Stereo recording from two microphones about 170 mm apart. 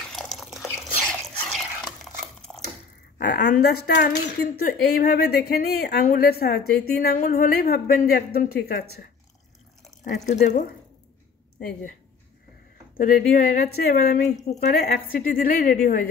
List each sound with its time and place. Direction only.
0.1 s drip: centre (ahead or behind)
1.0 s a sound: centre (ahead or behind)
3.2 s a woman's voice: 70° left (ahead or behind)
4.6 s speech: 60° left (ahead or behind)
10.2 s a woman's voice: 45° left (ahead or behind)
12.9 s speech: 55° left (ahead or behind)
14.5 s a woman's voice: 40° left (ahead or behind)
14.8 s a woman's voice: 55° left (ahead or behind)